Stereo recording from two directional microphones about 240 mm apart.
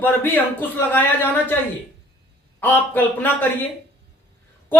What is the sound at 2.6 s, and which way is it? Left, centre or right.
Speech, centre.